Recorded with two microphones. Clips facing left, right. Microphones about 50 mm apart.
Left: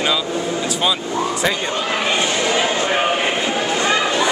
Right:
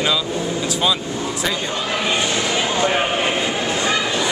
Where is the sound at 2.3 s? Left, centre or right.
Left.